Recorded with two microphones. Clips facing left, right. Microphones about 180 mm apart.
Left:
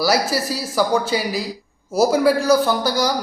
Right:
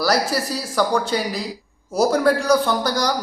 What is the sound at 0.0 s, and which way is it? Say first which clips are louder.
A man's voice: left 1 dB; 5° left (ahead or behind).